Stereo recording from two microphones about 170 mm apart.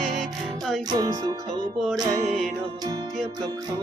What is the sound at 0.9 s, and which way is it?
Music, 25° right (ahead or behind).